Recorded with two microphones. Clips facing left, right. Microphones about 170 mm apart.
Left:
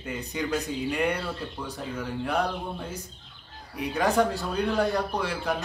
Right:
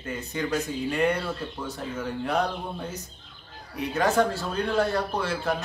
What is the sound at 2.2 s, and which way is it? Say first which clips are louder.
Speech: right 1 dB; 10° left (ahead or behind).